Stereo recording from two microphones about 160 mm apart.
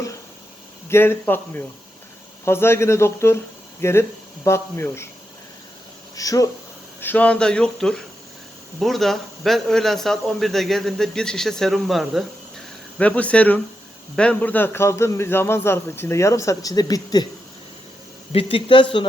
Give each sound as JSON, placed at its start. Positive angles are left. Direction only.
{"t": 0.9, "sound": "a man's voice", "side_deg": 15}
{"t": 6.1, "sound": "speech", "side_deg": 20}
{"t": 7.0, "sound": "a man's voice", "side_deg": 10}
{"t": 18.3, "sound": "speech", "side_deg": 35}